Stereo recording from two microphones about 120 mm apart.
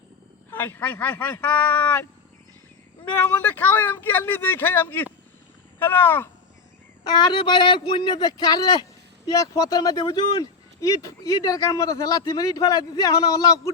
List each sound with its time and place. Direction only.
0.5 s speech: 15° left (ahead or behind)
3.0 s speech: 15° left (ahead or behind)
7.1 s speech: 35° left (ahead or behind)